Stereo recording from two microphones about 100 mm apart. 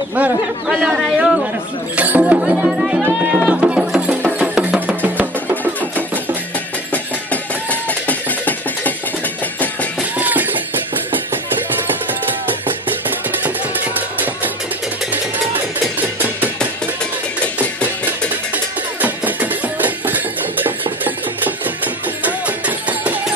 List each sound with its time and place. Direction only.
0.1 s speech: 10° right (ahead or behind)
3.1 s music: 10° right (ahead or behind)
8.1 s music: 15° left (ahead or behind)
10.1 s music: 15° right (ahead or behind)
18.9 s music: 15° right (ahead or behind)